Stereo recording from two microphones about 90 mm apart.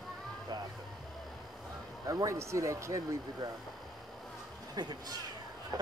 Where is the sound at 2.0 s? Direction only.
35° right (ahead or behind).